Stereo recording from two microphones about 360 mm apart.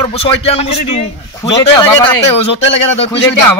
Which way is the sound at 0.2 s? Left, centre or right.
Centre.